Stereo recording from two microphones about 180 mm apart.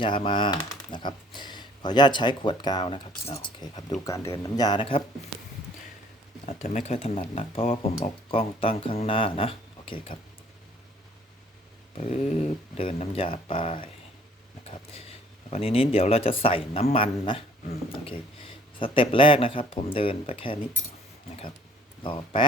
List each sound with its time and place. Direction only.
0.0 s speech: 25° left (ahead or behind)
5.3 s a sound: centre (ahead or behind)
6.4 s speech: 40° left (ahead or behind)
11.9 s speech: 40° left (ahead or behind)
15.4 s speech: 35° left (ahead or behind)
18.8 s speech: 30° left (ahead or behind)
22.0 s speech: 25° left (ahead or behind)